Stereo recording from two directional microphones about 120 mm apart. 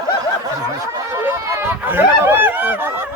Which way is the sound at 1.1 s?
20° right (ahead or behind).